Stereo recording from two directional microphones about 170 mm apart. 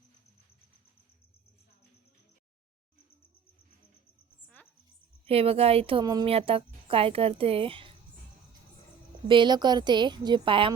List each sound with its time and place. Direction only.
5.2 s speech: 35° right (ahead or behind)
6.3 s speech: 35° right (ahead or behind)
9.2 s a woman's voice: 30° right (ahead or behind)